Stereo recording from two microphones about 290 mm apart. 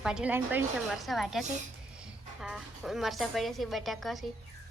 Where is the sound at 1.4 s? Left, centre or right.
Right.